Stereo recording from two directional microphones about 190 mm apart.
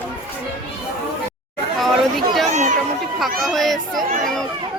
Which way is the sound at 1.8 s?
Centre (ahead or behind).